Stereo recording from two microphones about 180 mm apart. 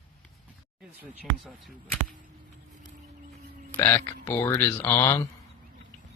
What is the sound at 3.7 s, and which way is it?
Speech, 10° left (ahead or behind).